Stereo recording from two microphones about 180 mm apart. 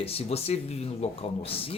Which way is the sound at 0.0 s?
35° left (ahead or behind).